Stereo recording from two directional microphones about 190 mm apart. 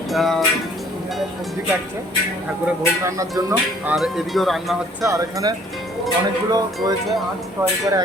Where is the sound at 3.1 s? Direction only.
15° right (ahead or behind).